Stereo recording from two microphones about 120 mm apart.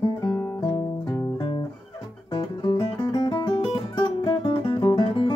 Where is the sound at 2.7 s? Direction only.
40° left (ahead or behind).